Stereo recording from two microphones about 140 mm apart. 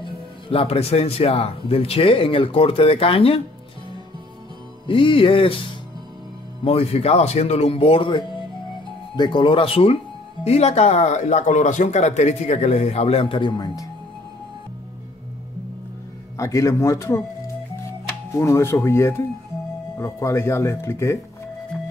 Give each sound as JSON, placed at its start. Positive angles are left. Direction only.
{"t": 0.0, "sound": "speech", "side_deg": 40}
{"t": 4.8, "sound": "speech", "side_deg": 35}
{"t": 6.6, "sound": "speech", "side_deg": 45}
{"t": 16.3, "sound": "speech", "side_deg": 20}